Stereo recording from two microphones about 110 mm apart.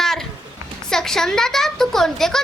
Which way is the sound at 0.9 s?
5° left (ahead or behind).